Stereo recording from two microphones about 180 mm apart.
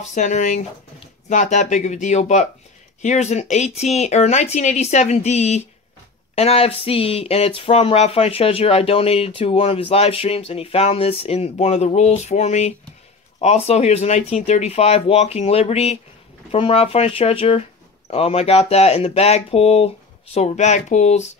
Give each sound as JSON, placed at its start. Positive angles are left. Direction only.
{"t": 0.0, "sound": "speech", "side_deg": 40}